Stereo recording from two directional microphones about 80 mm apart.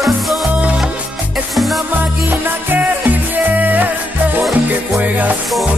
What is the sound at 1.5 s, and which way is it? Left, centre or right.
Music, centre.